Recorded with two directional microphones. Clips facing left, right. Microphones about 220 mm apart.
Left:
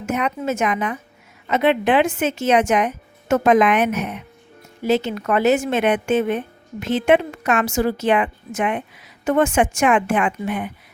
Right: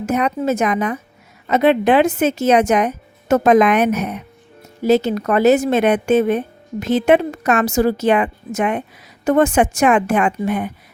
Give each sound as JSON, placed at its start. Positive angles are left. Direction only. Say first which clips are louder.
{"t": 0.0, "sound": "a woman's voice", "louder": "right 4 dB", "side_deg": -35}